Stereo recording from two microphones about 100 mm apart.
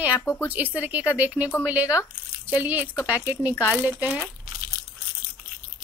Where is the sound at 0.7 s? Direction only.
15° right (ahead or behind).